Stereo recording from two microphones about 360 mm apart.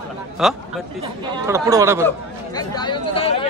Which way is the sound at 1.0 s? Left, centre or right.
Centre.